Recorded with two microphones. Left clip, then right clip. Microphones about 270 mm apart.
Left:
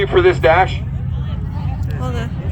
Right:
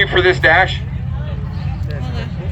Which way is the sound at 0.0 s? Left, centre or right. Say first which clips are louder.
Even; left.